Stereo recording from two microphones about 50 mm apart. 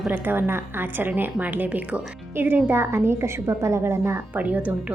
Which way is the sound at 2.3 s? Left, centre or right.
Right.